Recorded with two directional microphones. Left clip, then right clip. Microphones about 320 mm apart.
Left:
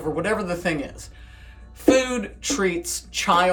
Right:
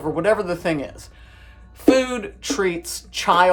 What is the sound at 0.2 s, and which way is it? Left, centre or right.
Speech, centre.